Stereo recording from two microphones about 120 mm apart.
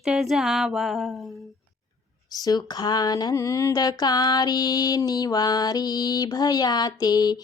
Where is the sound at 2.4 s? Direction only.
35° left (ahead or behind).